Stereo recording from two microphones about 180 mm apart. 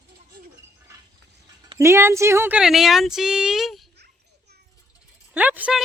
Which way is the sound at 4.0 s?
65° right (ahead or behind).